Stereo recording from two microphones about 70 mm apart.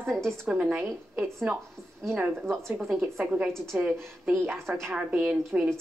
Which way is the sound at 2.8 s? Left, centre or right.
Centre.